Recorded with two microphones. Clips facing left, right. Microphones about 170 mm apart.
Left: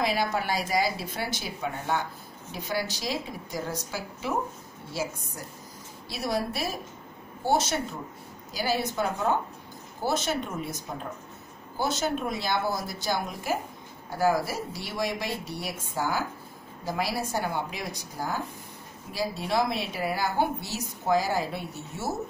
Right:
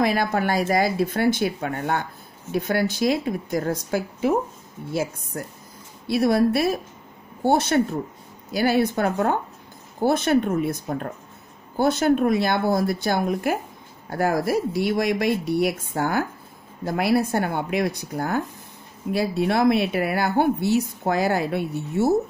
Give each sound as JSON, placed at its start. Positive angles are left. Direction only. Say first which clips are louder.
{"t": 0.0, "sound": "a woman's voice", "louder": "right 6 dB", "side_deg": -55}
{"t": 6.0, "sound": "a woman's voice", "louder": "right 11 dB", "side_deg": -60}